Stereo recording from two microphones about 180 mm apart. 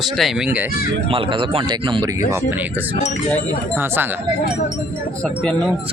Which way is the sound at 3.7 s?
10° right (ahead or behind).